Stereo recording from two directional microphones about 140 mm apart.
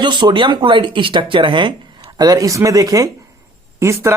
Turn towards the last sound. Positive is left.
turn(degrees=-20)  # may be behind; listen again after turning